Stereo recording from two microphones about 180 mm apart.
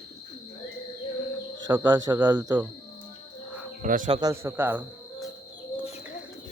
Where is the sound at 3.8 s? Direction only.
45° right (ahead or behind).